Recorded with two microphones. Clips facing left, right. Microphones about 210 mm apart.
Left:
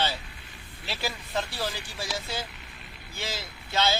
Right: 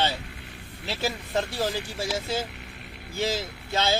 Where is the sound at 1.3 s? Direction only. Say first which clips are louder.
Right 4 dB; 45° right (ahead or behind).